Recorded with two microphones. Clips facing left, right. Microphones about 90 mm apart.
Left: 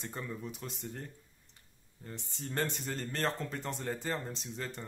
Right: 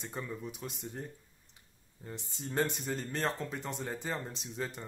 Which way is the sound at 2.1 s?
5° right (ahead or behind).